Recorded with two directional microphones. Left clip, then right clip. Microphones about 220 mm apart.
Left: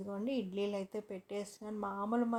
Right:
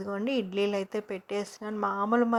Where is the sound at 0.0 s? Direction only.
20° right (ahead or behind).